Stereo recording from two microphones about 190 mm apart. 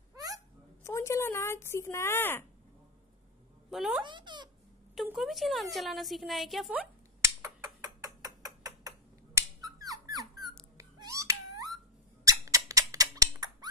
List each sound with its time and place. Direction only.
0.1 s hiccup: 20° right (ahead or behind)
0.8 s speech: 15° left (ahead or behind)
3.7 s a woman's voice: centre (ahead or behind)
4.0 s speech: 25° right (ahead or behind)
4.9 s a woman's voice: centre (ahead or behind)
7.4 s a sound: 15° right (ahead or behind)
10.8 s cat: 15° right (ahead or behind)
12.3 s squeak: 15° right (ahead or behind)